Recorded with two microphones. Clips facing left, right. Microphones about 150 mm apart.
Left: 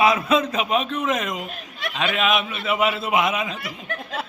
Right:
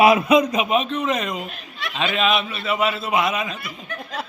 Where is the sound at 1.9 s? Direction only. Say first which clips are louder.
Right 1 dB; centre (ahead or behind).